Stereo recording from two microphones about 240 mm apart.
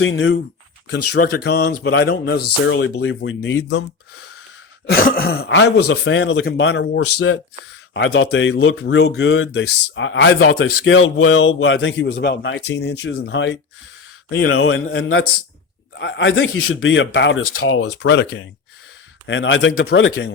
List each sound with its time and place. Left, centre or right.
0.0 s a man's voice: left